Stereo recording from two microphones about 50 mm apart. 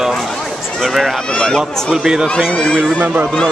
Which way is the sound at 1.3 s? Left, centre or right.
Centre.